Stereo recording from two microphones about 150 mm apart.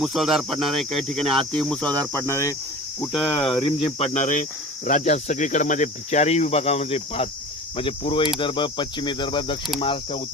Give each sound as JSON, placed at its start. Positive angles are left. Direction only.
{"t": 0.0, "sound": "speech", "side_deg": 0}
{"t": 3.2, "sound": "cricket", "side_deg": 35}